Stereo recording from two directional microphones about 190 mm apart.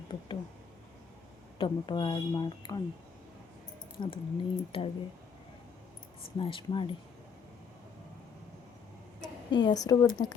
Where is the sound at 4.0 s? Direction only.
25° left (ahead or behind).